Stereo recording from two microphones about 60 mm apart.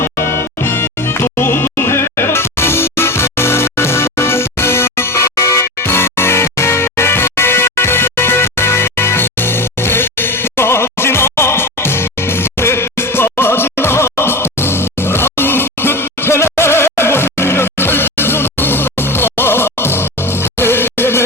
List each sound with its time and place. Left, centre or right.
0.0 s music: left